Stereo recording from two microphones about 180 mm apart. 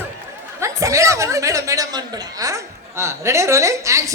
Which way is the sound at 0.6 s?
15° right (ahead or behind).